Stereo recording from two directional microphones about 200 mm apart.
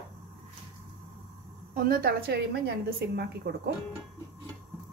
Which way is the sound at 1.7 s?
45° right (ahead or behind).